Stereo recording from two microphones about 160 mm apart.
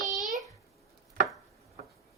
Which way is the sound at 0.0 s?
50° right (ahead or behind).